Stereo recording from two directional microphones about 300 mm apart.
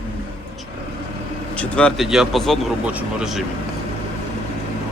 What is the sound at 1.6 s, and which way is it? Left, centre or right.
Speech, centre.